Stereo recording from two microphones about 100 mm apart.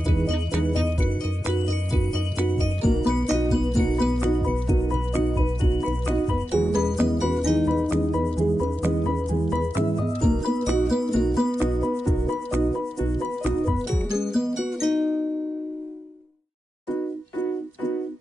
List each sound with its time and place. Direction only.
2.9 s music: centre (ahead or behind)
6.3 s music: 5° right (ahead or behind)
10.2 s music: centre (ahead or behind)
13.7 s music: centre (ahead or behind)
17.4 s music: 15° left (ahead or behind)